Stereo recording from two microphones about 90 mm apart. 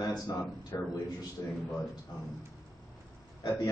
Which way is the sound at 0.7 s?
35° left (ahead or behind).